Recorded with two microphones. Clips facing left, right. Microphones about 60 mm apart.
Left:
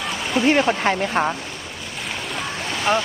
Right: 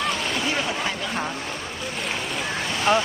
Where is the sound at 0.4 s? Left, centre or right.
Left.